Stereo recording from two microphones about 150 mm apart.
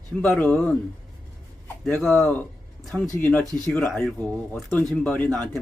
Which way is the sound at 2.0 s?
10° left (ahead or behind).